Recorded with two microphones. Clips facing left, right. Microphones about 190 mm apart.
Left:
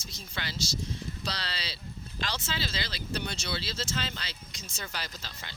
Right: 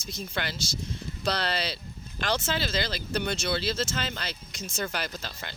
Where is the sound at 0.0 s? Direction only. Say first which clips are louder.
Right 6 dB; 55° right (ahead or behind).